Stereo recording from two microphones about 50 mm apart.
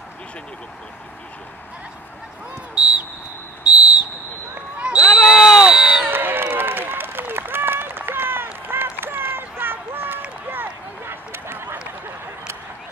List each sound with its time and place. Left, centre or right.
2.7 s basketball bounce: right
3.6 s whistle: right
4.7 s basketball bounce: right
5.1 s a sound: centre
6.0 s a sound: right
10.5 s run: right